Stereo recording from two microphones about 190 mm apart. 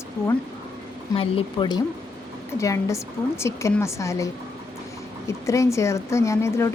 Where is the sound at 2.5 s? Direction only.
15° left (ahead or behind).